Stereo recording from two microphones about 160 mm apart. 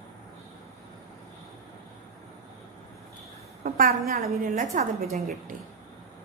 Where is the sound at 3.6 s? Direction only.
65° right (ahead or behind).